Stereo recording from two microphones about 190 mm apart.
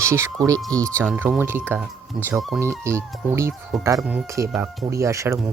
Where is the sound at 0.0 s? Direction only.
15° right (ahead or behind).